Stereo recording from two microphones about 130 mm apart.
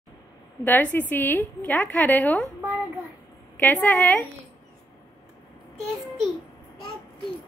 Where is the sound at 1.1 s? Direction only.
15° left (ahead or behind).